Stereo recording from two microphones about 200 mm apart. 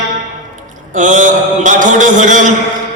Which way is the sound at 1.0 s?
40° right (ahead or behind).